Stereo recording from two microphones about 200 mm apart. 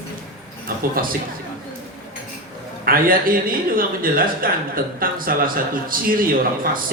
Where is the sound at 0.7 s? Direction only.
50° right (ahead or behind).